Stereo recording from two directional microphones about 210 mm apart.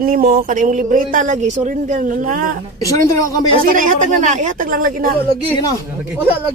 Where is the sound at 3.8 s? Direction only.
35° right (ahead or behind).